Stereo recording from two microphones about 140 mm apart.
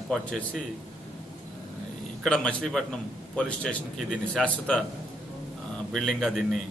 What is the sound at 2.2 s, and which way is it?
A man's voice, 5° left (ahead or behind).